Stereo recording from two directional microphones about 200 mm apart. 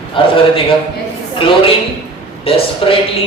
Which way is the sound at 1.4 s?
25° left (ahead or behind).